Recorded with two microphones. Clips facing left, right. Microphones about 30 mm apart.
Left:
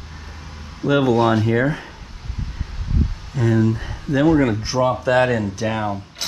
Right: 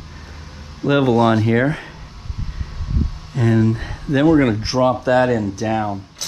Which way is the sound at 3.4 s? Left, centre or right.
Right.